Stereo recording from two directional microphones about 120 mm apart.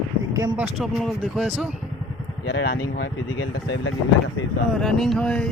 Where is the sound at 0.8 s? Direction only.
Centre (ahead or behind).